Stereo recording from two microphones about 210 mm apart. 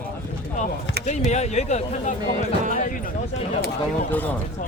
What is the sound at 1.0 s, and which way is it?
Speech, 35° left (ahead or behind).